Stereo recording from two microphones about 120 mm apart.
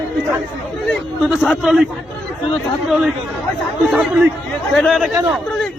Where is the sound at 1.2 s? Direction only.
5° right (ahead or behind).